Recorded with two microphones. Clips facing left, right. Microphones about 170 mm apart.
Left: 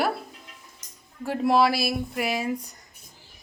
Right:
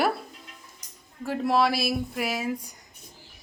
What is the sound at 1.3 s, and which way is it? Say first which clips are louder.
A woman's voice: left 2 dB; centre (ahead or behind).